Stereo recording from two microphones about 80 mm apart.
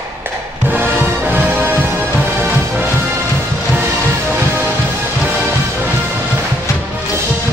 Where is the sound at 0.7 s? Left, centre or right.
Right.